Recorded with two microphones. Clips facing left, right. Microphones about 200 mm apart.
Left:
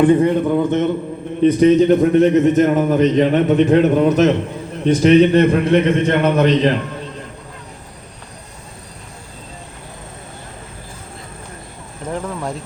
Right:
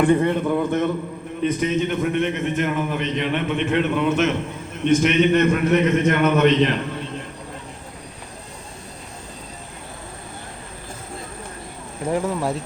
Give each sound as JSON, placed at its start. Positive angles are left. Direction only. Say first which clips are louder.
{"t": 0.0, "sound": "a man's voice", "louder": "left 5 dB", "side_deg": 20}
{"t": 1.4, "sound": "a man's voice", "louder": "left 10 dB", "side_deg": 35}
{"t": 12.0, "sound": "speech", "louder": "right 2 dB", "side_deg": -10}